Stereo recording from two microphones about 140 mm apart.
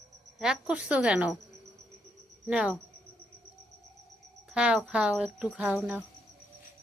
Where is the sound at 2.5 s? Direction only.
5° right (ahead or behind).